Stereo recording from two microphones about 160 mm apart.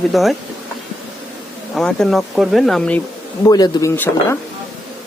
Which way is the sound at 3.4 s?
20° left (ahead or behind).